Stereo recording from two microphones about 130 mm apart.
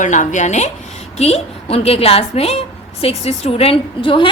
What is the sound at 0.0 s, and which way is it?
Speech, 70° left (ahead or behind).